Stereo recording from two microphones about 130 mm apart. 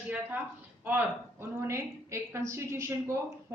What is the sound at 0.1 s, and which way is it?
A woman's voice, 15° right (ahead or behind).